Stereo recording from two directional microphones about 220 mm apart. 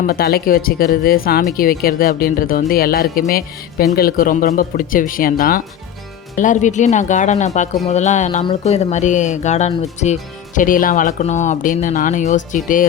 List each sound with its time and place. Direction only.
0.0 s speech: 45° left (ahead or behind)